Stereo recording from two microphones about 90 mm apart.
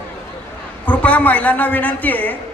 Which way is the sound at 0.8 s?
15° left (ahead or behind).